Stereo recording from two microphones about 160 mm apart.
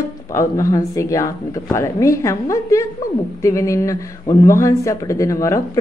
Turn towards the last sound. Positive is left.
turn(degrees=20)  # may be behind; listen again after turning